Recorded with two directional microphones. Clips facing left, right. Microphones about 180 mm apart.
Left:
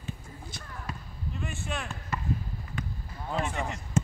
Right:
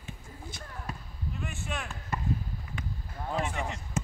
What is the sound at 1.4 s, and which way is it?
Speech, 5° right (ahead or behind).